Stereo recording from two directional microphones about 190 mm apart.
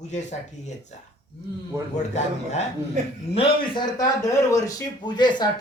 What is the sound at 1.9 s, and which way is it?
A man's voice, 35° left (ahead or behind).